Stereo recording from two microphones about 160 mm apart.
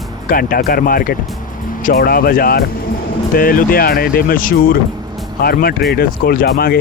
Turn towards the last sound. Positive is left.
turn(degrees=70)  # may be behind; listen again after turning